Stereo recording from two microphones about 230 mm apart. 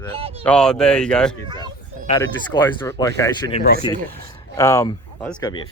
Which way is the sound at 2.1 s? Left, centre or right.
Centre.